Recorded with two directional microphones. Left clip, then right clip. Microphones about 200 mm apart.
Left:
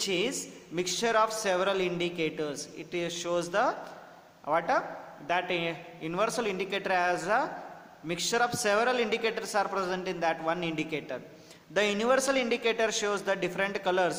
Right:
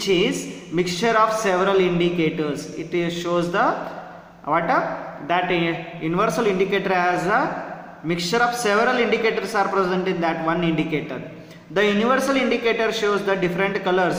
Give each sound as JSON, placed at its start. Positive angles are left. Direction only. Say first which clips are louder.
{"t": 0.0, "sound": "a woman's voice", "louder": "right 10 dB", "side_deg": 40}